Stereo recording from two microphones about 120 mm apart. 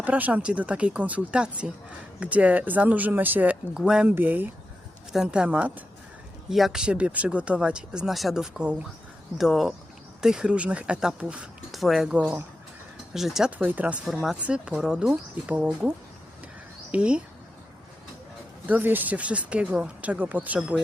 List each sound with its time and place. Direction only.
0.0 s speech: 15° right (ahead or behind)
4.1 s speech: 15° right (ahead or behind)
13.6 s speech: 15° right (ahead or behind)
16.9 s speech: 10° right (ahead or behind)
18.6 s speech: 15° right (ahead or behind)